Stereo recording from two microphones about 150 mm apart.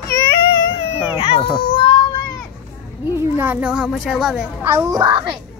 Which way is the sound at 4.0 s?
5° right (ahead or behind).